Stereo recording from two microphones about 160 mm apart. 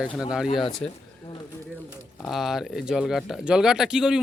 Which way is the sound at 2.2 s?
Centre (ahead or behind).